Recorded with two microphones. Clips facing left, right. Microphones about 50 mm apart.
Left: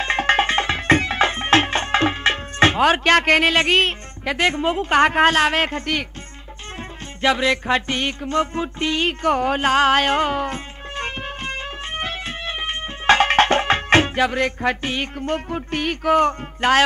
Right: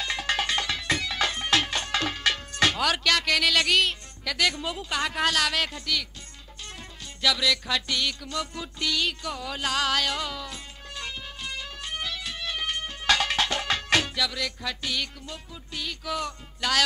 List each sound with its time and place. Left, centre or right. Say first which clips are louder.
0.0 s music: left 10 dB; left
7.2 s music: left 7 dB; left
15.2 s speech: left 17 dB; left